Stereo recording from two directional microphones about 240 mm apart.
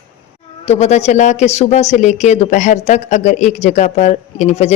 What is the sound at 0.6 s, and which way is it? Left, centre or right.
Speech, left.